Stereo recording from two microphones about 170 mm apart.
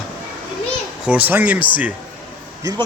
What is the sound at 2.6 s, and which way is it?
Speech, 20° right (ahead or behind).